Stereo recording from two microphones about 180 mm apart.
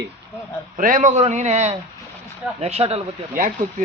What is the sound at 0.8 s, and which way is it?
A man's voice, 45° right (ahead or behind).